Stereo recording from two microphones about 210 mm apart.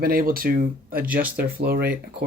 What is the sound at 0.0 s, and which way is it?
Speech, 45° right (ahead or behind).